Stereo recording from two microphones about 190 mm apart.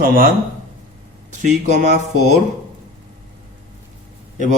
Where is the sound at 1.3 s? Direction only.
40° right (ahead or behind).